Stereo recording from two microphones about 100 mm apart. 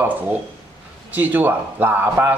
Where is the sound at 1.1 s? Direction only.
20° right (ahead or behind).